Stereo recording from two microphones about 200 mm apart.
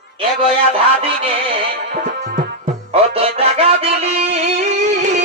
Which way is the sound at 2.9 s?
30° right (ahead or behind).